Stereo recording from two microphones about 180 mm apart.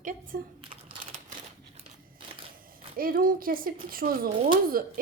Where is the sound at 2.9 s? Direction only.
55° right (ahead or behind).